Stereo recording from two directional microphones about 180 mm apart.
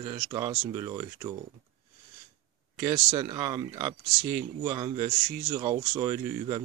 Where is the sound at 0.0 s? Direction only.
25° right (ahead or behind).